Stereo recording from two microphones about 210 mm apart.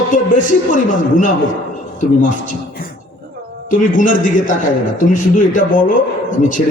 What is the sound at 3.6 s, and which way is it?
A man's voice, 40° left (ahead or behind).